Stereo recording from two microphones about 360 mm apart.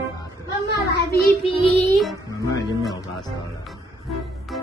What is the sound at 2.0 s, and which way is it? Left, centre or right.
Music, centre.